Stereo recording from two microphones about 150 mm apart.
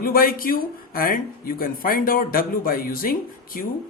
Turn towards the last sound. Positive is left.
turn(degrees=70)  # may be behind; listen again after turning